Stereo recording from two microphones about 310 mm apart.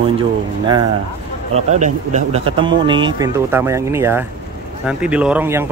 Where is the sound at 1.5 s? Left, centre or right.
Right.